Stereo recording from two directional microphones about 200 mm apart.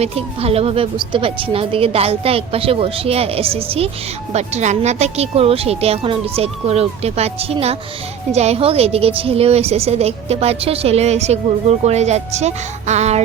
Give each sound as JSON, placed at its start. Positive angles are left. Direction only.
{"t": 0.0, "sound": "a woman's voice", "side_deg": -30}